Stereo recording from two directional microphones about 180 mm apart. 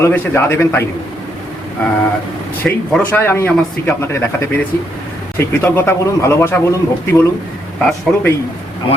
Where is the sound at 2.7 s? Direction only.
5° left (ahead or behind).